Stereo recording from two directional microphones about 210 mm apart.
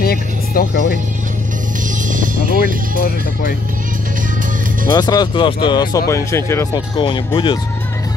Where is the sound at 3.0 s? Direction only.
45° left (ahead or behind).